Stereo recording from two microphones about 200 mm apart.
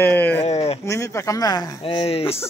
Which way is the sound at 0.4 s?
30° left (ahead or behind).